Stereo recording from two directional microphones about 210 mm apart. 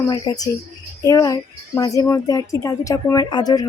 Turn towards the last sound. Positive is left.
turn(degrees=20)  # may be behind; listen again after turning